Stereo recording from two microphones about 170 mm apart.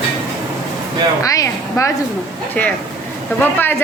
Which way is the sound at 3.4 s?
10° left (ahead or behind).